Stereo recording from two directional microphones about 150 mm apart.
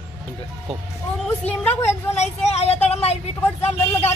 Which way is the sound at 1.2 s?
10° left (ahead or behind).